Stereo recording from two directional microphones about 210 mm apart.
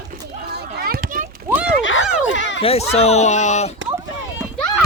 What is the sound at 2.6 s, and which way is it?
Speech, 30° left (ahead or behind).